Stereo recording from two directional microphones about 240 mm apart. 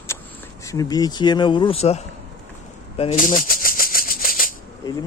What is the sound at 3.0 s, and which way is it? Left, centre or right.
Maraca, left.